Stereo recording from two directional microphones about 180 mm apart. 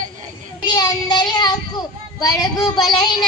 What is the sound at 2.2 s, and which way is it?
A woman's voice, 20° left (ahead or behind).